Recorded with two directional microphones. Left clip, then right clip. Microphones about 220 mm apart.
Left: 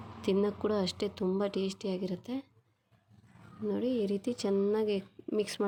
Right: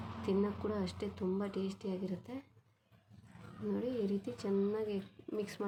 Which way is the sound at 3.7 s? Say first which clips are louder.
Left 5 dB; 40° left (ahead or behind).